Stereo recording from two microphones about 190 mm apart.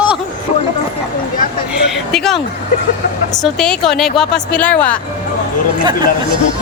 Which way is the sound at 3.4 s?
5° left (ahead or behind).